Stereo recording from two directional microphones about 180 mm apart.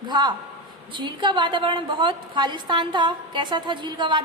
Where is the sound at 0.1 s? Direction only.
25° right (ahead or behind).